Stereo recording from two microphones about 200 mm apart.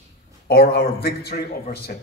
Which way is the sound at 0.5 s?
50° left (ahead or behind).